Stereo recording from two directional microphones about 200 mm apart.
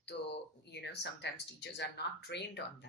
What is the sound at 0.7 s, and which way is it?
Speech, 60° left (ahead or behind).